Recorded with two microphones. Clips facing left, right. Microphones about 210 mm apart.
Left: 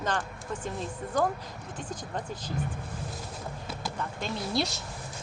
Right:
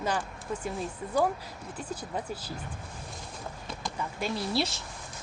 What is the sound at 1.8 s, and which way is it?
Speech, 5° right (ahead or behind).